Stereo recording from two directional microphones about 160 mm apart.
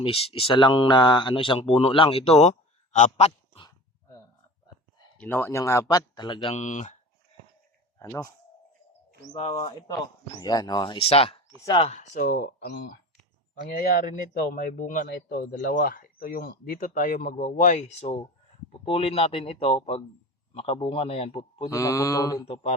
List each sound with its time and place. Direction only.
0.0 s speech: 35° left (ahead or behind)
5.1 s speech: 10° left (ahead or behind); by 6.6 s 30° left (ahead or behind)
6.6 s speech: 50° left (ahead or behind)
7.9 s a man's voice: 15° left (ahead or behind)
9.4 s speech: 35° left (ahead or behind)
11.9 s speech: 50° left (ahead or behind); by 12.9 s 75° left (ahead or behind)
13.6 s speech: 60° left (ahead or behind); by 21.7 s 40° left (ahead or behind)
21.7 s speech: 20° left (ahead or behind)
22.4 s speech: 40° left (ahead or behind)